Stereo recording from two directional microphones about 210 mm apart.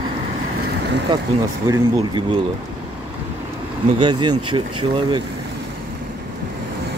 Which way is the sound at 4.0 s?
20° right (ahead or behind).